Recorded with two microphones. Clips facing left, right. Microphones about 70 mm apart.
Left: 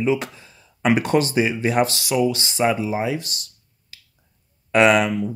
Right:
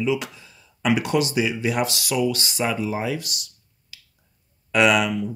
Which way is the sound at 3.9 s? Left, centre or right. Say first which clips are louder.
Even; left.